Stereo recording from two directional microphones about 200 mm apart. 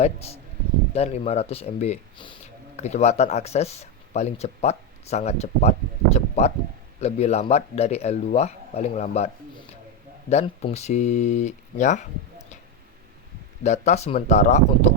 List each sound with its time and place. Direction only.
0.9 s speech: 30° left (ahead or behind)
13.7 s speech: 35° left (ahead or behind)